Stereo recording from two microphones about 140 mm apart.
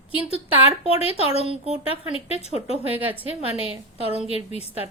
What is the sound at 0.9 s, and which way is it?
Speech, 45° left (ahead or behind).